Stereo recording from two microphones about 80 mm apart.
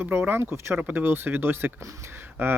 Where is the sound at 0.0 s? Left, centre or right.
Right.